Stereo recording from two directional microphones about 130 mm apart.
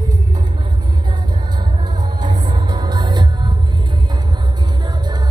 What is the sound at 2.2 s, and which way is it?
Music, 35° right (ahead or behind).